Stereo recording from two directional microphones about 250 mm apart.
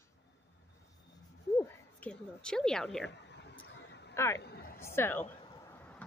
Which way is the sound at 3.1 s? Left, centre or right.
Left.